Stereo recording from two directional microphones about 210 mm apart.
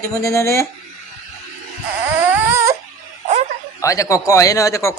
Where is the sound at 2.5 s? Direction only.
15° right (ahead or behind).